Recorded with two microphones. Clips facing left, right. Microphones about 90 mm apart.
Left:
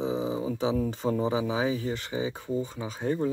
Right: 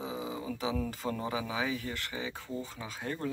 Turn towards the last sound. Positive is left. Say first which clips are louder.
# left 8 dB
turn(degrees=20)  # may be behind; listen again after turning